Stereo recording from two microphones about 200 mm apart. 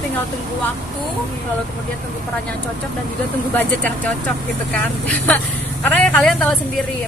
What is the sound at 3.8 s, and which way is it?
Speech, 5° left (ahead or behind).